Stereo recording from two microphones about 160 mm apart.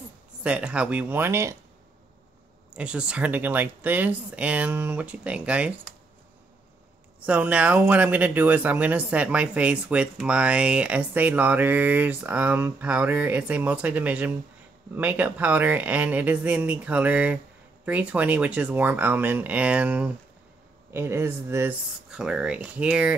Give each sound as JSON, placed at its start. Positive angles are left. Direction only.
{"t": 0.4, "sound": "speech", "side_deg": -5}
{"t": 2.7, "sound": "speech", "side_deg": -5}
{"t": 7.2, "sound": "speech", "side_deg": -10}
{"t": 22.1, "sound": "speech", "side_deg": -5}